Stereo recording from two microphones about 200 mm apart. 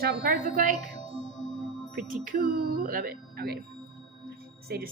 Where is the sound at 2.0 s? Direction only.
45° right (ahead or behind).